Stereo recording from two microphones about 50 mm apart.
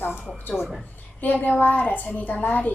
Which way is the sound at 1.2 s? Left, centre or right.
Left.